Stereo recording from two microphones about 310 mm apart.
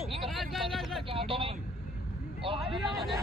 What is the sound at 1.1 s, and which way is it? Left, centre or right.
Vehicle, centre.